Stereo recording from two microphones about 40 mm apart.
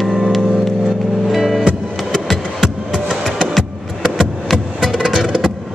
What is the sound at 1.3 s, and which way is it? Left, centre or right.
Music, centre.